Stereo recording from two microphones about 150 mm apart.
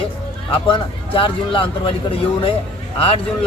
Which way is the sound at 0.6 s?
35° left (ahead or behind).